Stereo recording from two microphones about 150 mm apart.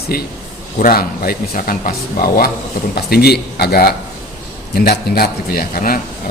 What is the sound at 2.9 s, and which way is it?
A man's voice, 90° left.